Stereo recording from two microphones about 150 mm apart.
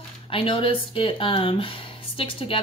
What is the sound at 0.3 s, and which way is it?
Speech, 35° left (ahead or behind).